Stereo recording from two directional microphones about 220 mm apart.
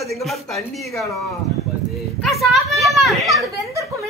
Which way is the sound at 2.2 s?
Centre (ahead or behind).